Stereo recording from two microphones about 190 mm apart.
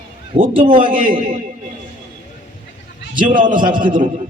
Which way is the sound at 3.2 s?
45° right (ahead or behind).